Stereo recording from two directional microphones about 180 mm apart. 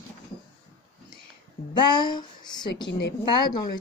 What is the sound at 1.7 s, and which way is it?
Speech, 25° left (ahead or behind).